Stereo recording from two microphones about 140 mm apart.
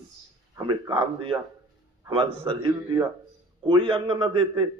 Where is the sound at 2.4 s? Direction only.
35° right (ahead or behind).